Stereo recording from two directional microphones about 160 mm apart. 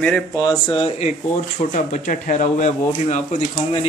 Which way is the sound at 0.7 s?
35° left (ahead or behind).